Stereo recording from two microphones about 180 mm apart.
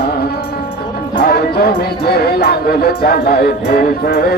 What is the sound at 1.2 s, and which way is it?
Music, 60° left (ahead or behind).